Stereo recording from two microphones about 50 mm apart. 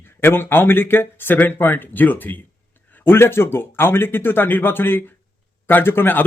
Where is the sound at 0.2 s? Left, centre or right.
Left.